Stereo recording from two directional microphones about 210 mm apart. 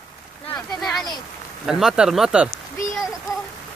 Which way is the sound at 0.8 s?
Centre (ahead or behind).